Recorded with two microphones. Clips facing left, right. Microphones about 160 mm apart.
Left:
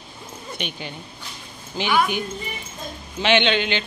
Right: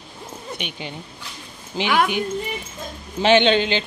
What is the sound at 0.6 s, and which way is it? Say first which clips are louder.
Speech: left 3 dB; 20° right (ahead or behind).